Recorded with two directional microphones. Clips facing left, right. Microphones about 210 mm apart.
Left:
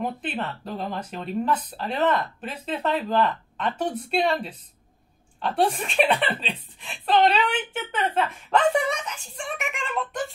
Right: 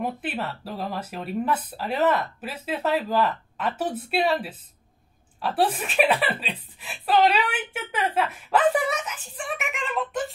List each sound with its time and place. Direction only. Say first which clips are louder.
0.0 s speech: even; 5° right (ahead or behind)